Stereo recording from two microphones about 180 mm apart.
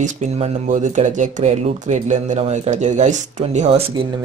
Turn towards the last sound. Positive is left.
turn(degrees=-40)  # may be behind; listen again after turning